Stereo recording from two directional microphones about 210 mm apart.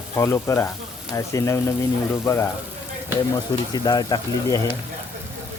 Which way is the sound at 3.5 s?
15° left (ahead or behind).